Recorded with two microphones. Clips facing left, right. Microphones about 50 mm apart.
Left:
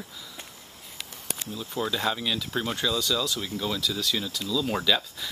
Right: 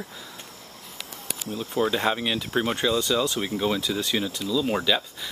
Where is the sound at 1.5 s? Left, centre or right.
Right.